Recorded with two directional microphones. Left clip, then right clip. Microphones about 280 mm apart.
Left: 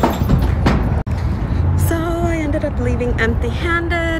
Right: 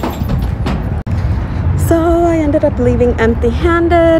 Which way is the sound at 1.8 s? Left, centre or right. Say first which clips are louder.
Right 10 dB; centre.